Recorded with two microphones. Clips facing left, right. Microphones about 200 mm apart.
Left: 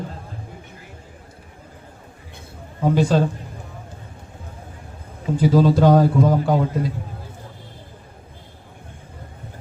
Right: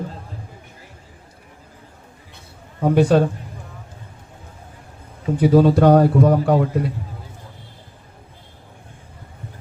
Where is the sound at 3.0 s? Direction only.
60° right (ahead or behind).